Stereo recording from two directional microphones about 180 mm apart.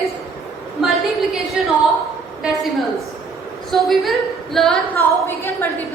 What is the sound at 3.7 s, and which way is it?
A woman's voice, centre (ahead or behind).